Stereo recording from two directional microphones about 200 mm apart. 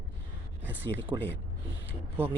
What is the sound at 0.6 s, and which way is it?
Speech, 10° right (ahead or behind).